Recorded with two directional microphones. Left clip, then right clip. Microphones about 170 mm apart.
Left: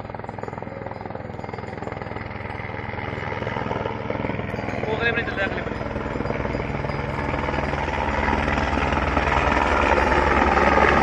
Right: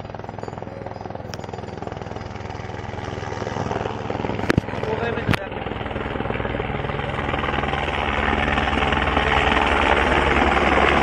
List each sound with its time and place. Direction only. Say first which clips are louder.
3.4 s vehicle: right 2 dB; 20° right (ahead or behind)
7.1 s vehicle: right 3 dB; 20° right (ahead or behind)
10.5 s a sound: even; 40° right (ahead or behind)